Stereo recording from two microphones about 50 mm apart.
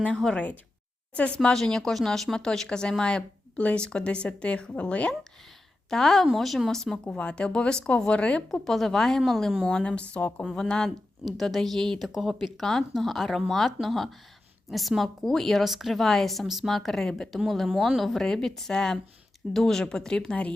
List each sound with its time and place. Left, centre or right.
0.3 s a sound: left
1.4 s a woman's voice: centre
5.9 s a woman's voice: centre; by 8.4 s left
8.6 s a woman's voice: centre
9.6 s speech: left
10.2 s a sound: left
10.4 s speech: centre
11.3 s a woman's voice: centre